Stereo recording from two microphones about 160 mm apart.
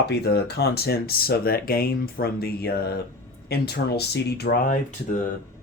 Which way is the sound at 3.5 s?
85° left.